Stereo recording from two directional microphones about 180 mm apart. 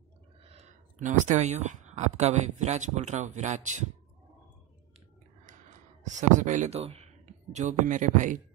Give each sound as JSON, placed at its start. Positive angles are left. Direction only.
{"t": 0.4, "sound": "speech", "side_deg": -35}
{"t": 5.4, "sound": "speech", "side_deg": -45}